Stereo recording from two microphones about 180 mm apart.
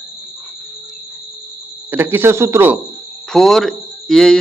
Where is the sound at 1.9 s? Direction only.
10° right (ahead or behind).